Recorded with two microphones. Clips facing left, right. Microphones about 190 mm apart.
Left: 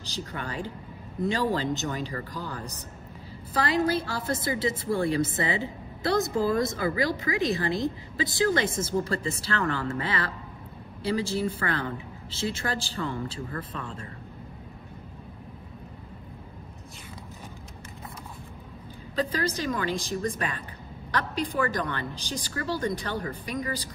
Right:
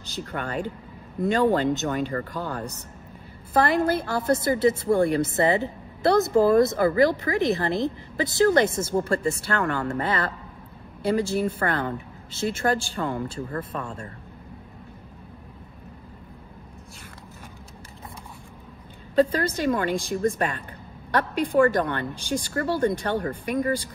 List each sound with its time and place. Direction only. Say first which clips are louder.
0.3 s a woman's voice: right 7 dB; 55° right (ahead or behind)
19.1 s a woman's voice: right 7 dB; 55° right (ahead or behind)